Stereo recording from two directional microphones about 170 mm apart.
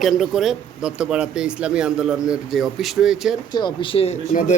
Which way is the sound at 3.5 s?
25° left (ahead or behind).